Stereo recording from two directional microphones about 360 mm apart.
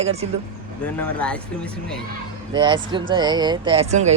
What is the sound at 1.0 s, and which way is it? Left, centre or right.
Speech, centre.